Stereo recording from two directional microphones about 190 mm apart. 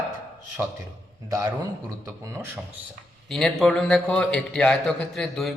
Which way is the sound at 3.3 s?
Centre (ahead or behind).